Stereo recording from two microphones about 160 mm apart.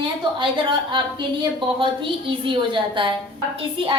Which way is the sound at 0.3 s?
30° right (ahead or behind).